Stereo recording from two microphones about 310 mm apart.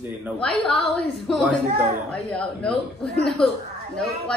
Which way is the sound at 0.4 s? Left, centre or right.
Centre.